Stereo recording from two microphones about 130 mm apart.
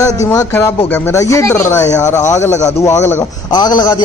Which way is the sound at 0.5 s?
15° left (ahead or behind).